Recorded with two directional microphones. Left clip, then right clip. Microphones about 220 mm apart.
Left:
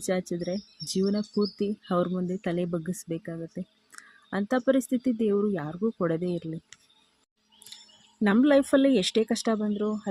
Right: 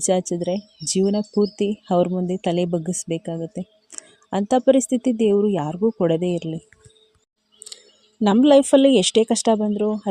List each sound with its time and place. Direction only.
0.0 s speech: 25° right (ahead or behind)
8.2 s speech: 25° right (ahead or behind)